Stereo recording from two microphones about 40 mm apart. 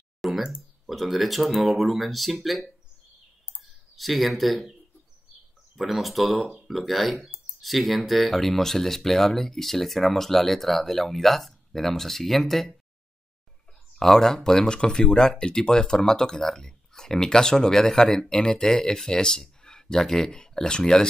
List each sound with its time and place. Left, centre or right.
0.2 s a sound: centre
0.6 s speech: centre
3.9 s speech: centre
5.8 s speech: centre
13.9 s speech: centre